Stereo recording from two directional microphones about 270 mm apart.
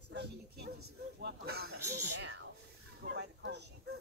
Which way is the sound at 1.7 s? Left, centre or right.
Right.